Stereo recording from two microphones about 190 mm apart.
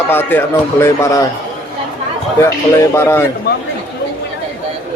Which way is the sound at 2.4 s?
15° left (ahead or behind).